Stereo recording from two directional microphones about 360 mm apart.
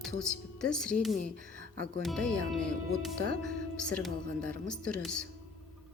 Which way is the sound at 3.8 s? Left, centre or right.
Centre.